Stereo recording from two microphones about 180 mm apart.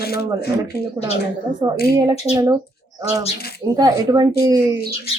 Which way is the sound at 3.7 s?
20° right (ahead or behind).